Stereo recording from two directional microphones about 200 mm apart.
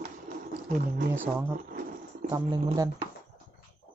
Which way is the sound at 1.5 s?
45° right (ahead or behind).